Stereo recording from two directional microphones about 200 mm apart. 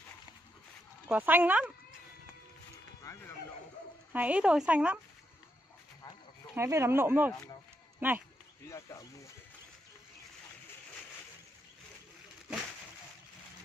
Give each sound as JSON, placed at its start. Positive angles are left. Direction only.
{"t": 1.0, "sound": "speech", "side_deg": -10}
{"t": 4.1, "sound": "speech", "side_deg": -5}
{"t": 6.5, "sound": "speech", "side_deg": -15}
{"t": 8.6, "sound": "speech", "side_deg": 15}